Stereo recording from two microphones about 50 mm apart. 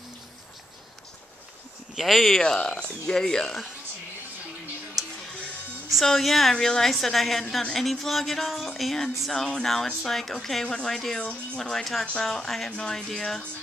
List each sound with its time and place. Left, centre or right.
2.0 s music: centre
2.4 s speech: centre
6.0 s music: centre
9.3 s speech: centre
11.1 s speech: centre
11.8 s music: centre
12.2 s speech: centre